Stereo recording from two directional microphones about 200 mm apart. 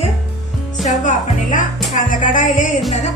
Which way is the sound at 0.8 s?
40° left (ahead or behind).